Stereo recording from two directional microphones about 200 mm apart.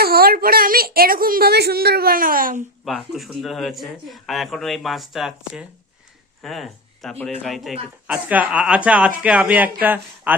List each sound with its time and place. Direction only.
0.0 s a woman's voice: 50° right (ahead or behind)
2.8 s speech: centre (ahead or behind)